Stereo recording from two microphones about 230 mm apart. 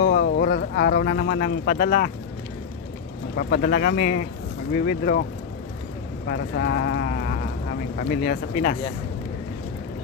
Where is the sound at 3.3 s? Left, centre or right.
Left.